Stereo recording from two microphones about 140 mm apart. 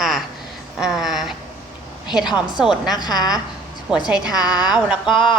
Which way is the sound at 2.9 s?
30° left (ahead or behind).